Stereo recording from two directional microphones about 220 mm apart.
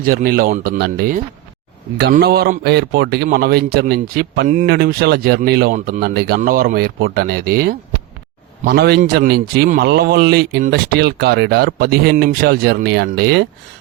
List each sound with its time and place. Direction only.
0.0 s a man's voice: 40° right (ahead or behind)